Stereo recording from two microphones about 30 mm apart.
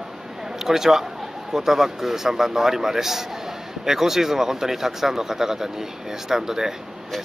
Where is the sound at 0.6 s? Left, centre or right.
Centre.